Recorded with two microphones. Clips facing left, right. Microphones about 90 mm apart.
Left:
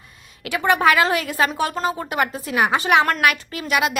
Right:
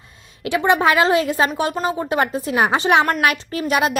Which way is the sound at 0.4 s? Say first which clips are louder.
Right 1 dB; 20° right (ahead or behind).